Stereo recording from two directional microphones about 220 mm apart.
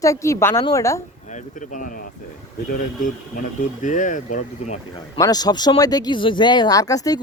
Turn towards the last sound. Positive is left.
turn(degrees=15)  # may be behind; listen again after turning